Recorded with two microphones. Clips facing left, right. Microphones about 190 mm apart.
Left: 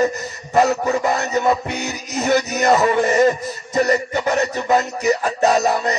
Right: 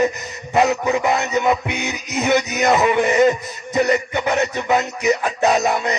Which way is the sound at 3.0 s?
15° right (ahead or behind).